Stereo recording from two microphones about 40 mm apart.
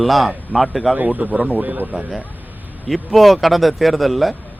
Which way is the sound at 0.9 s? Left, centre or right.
Right.